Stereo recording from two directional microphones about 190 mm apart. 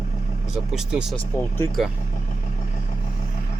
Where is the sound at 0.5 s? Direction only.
5° right (ahead or behind).